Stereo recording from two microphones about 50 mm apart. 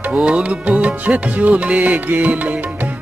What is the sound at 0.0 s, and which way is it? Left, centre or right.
Music, right.